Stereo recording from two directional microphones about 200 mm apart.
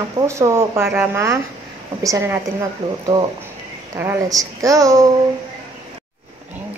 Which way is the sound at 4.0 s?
15° right (ahead or behind).